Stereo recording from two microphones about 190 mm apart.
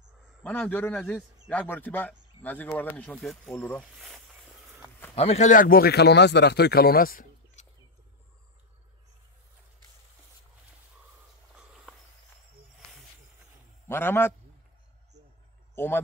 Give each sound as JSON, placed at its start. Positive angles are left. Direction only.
{"t": 0.4, "sound": "speech", "side_deg": 10}
{"t": 5.1, "sound": "speech", "side_deg": 35}
{"t": 13.8, "sound": "a man's voice", "side_deg": 10}
{"t": 15.7, "sound": "speech", "side_deg": 10}